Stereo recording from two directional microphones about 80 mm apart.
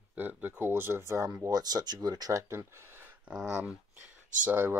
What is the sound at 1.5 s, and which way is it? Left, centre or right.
Speech, right.